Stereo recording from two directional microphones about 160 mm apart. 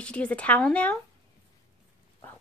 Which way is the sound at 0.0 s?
5° left (ahead or behind).